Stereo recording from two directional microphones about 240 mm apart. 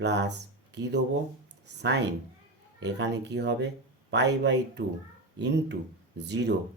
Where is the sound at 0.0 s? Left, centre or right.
Right.